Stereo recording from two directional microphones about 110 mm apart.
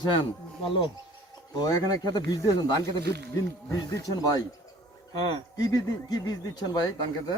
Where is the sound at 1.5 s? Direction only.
35° left (ahead or behind).